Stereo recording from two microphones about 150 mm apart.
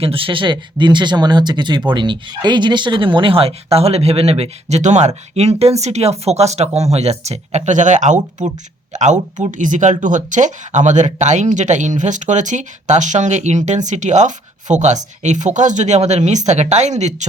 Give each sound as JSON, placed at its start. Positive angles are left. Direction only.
{"t": 0.0, "sound": "speech", "side_deg": -35}